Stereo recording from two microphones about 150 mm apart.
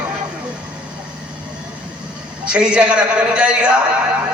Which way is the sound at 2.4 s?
5° right (ahead or behind).